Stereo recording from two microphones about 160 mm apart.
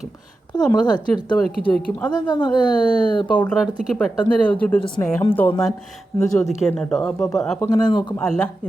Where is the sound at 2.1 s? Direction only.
25° left (ahead or behind).